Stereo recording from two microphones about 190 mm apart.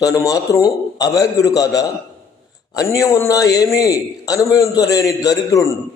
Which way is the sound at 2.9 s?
15° left (ahead or behind).